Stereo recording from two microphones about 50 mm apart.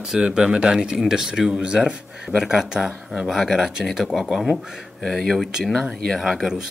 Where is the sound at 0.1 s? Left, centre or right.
Centre.